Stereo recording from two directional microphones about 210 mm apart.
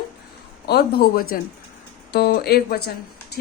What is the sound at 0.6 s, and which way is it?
A woman's voice, 50° left (ahead or behind).